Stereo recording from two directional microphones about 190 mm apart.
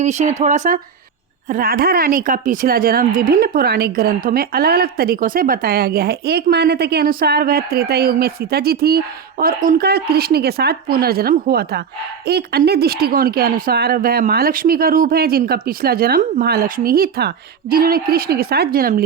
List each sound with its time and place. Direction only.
0.0 s a woman's voice: 40° right (ahead or behind)